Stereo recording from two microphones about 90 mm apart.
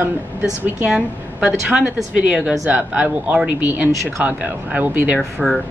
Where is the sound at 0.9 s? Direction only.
10° right (ahead or behind).